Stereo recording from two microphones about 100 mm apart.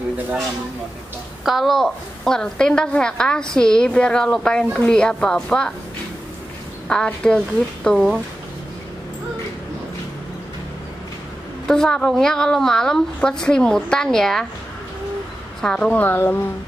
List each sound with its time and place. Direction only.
1.4 s a woman's voice: centre (ahead or behind)
6.9 s a woman's voice: 10° left (ahead or behind)
11.6 s a woman's voice: 5° left (ahead or behind)
15.6 s a woman's voice: 10° left (ahead or behind)